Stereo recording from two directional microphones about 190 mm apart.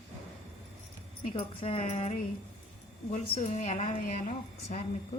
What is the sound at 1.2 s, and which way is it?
A woman's voice, 30° left (ahead or behind).